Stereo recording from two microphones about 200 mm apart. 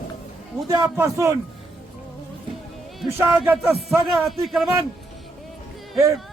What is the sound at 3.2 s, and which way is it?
A man's voice, 10° right (ahead or behind).